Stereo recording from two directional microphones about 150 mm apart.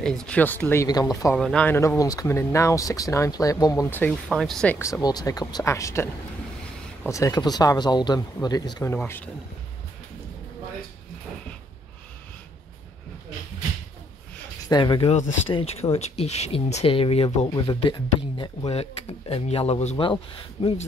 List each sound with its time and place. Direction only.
0.0 s speech: 5° left (ahead or behind)
0.8 s speech: 25° left (ahead or behind)
1.3 s speech: 5° left (ahead or behind)
1.8 s speech: 20° left (ahead or behind)
4.3 s speech: centre (ahead or behind)
4.7 s speech: 20° left (ahead or behind)
7.1 s speech: 20° left (ahead or behind)
8.9 s speech: 15° left (ahead or behind)
14.7 s speech: 30° left (ahead or behind)
18.7 s speech: 45° left (ahead or behind)